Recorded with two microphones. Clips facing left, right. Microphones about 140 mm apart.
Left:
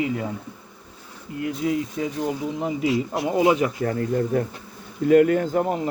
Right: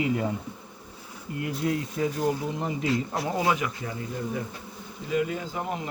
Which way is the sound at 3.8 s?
55° left (ahead or behind).